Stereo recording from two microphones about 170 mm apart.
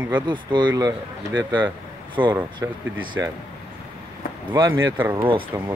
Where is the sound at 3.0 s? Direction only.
25° right (ahead or behind).